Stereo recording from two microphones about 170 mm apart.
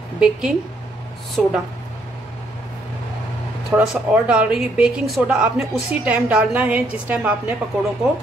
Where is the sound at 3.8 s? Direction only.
5° right (ahead or behind).